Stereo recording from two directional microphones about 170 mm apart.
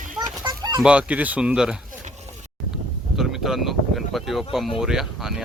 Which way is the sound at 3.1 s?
Centre (ahead or behind).